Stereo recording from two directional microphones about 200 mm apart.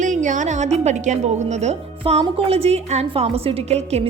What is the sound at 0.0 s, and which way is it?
A woman's voice, 40° right (ahead or behind).